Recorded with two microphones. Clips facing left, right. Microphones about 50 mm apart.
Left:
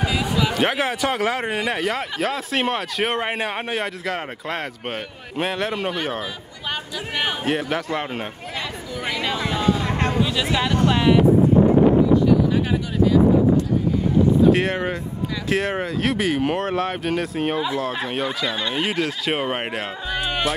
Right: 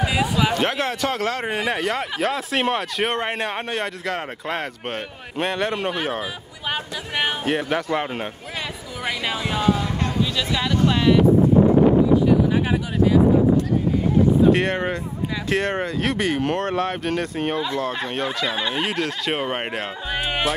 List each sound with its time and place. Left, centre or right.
0.0 s a sound: centre
0.6 s speech: centre
9.8 s a sound: left
10.2 s speech: centre
14.5 s speech: centre
20.1 s speech: centre